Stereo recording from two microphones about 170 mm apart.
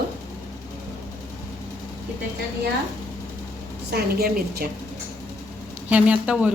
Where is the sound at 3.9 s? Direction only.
65° right (ahead or behind).